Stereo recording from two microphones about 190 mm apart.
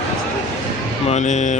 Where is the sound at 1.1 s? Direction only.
40° left (ahead or behind).